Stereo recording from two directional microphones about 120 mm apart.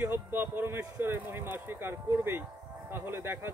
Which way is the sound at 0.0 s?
15° right (ahead or behind).